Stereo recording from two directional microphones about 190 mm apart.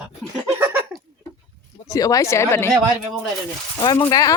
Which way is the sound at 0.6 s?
10° right (ahead or behind).